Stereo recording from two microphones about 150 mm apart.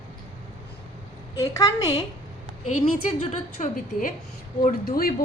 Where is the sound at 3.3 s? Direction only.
55° left (ahead or behind).